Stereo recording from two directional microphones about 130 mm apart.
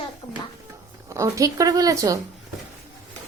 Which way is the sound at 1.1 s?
25° right (ahead or behind).